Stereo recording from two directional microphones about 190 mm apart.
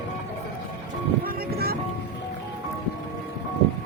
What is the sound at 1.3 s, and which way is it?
Music, 55° right (ahead or behind).